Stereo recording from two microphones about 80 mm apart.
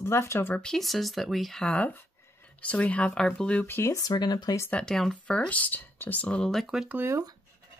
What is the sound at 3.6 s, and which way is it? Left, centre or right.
Speech, left.